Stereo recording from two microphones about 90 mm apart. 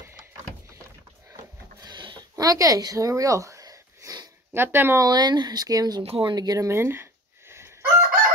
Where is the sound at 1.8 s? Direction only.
60° right (ahead or behind).